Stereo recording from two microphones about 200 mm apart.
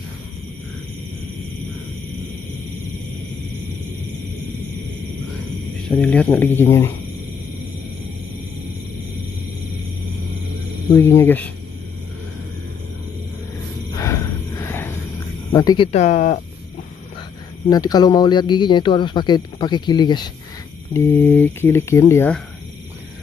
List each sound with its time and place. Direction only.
5.9 s speech: 5° left (ahead or behind)
11.0 s speech: 10° left (ahead or behind)
13.9 s a sound: 15° left (ahead or behind)
15.5 s a man's voice: 20° left (ahead or behind)
15.9 s speech: 35° left (ahead or behind)
17.6 s a man's voice: 20° left (ahead or behind)